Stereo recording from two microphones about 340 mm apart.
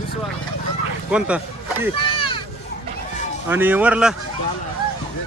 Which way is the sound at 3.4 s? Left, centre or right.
Centre.